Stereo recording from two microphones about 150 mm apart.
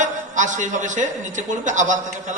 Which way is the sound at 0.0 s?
55° right (ahead or behind).